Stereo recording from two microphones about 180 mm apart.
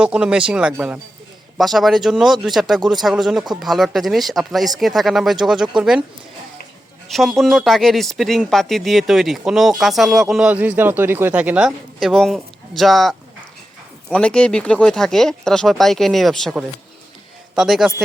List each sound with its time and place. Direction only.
0.0 s speech: 5° right (ahead or behind)
7.1 s a man's voice: centre (ahead or behind)